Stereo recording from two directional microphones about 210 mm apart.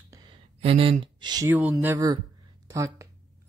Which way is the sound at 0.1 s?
20° right (ahead or behind).